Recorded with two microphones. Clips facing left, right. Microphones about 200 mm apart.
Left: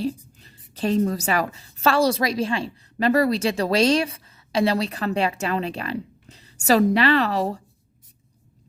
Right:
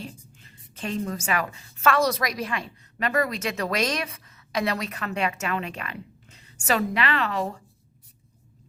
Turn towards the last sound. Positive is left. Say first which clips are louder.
# left 6 dB
turn(degrees=35)  # may be behind; listen again after turning